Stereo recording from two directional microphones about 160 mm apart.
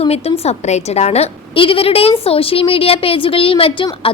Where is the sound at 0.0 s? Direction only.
40° left (ahead or behind).